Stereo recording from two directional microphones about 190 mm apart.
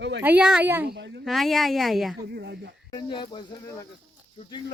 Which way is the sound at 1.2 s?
Centre (ahead or behind).